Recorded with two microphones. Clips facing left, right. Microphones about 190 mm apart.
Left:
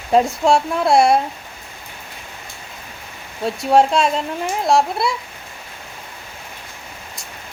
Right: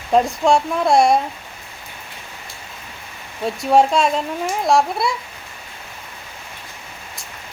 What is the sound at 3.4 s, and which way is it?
Speech, centre (ahead or behind).